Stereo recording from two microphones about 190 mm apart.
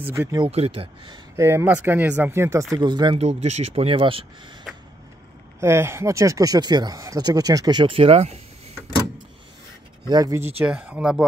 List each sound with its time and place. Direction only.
0.0 s speech: 10° right (ahead or behind)
0.5 s speech: 30° right (ahead or behind)
1.3 s speech: 10° right (ahead or behind)
3.3 s speech: 35° right (ahead or behind)
5.6 s speech: 15° right (ahead or behind); by 8.4 s 35° right (ahead or behind)
10.0 s speech: 20° right (ahead or behind); by 11.2 s 5° right (ahead or behind)